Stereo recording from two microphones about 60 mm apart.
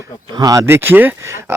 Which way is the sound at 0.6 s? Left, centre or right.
Right.